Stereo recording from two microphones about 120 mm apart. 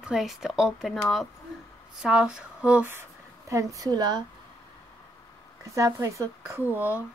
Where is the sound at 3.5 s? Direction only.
30° right (ahead or behind).